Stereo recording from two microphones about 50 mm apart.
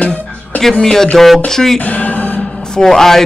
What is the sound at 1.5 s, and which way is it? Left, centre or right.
Music, centre.